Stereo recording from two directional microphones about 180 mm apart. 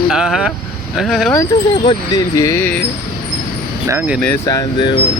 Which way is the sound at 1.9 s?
20° left (ahead or behind).